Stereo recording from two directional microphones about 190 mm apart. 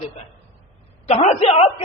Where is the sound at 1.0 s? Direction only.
35° left (ahead or behind).